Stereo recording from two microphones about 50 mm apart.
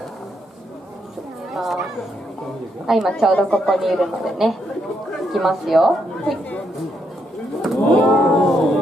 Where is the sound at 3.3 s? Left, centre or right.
Left.